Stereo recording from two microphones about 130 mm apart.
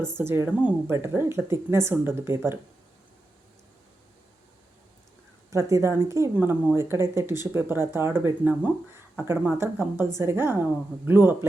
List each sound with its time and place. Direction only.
0.2 s speech: 20° right (ahead or behind)
5.5 s a woman's voice: 25° right (ahead or behind)